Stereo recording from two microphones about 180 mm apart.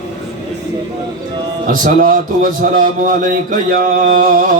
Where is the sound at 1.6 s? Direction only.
50° right (ahead or behind).